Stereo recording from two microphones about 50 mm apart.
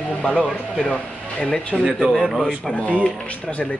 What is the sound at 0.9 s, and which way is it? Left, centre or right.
Speech, left.